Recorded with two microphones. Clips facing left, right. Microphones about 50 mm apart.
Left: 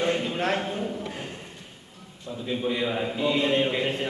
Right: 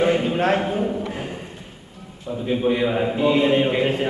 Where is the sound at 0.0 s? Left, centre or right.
Centre.